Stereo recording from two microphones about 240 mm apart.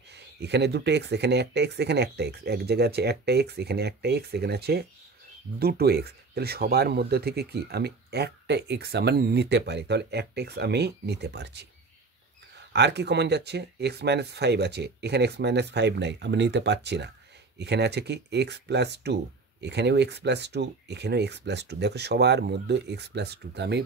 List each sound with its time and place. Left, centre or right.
0.1 s speech: right